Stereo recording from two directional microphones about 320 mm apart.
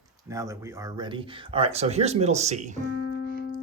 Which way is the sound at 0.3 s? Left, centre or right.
Centre.